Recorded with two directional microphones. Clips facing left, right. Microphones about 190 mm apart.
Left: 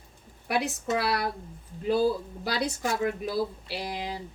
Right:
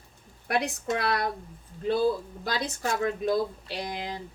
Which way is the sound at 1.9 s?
35° left (ahead or behind).